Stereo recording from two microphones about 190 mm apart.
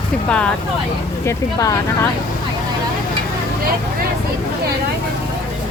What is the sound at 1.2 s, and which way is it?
Speech, 20° left (ahead or behind).